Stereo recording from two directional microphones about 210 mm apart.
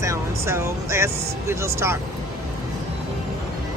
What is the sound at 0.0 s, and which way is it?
Speech, 15° right (ahead or behind).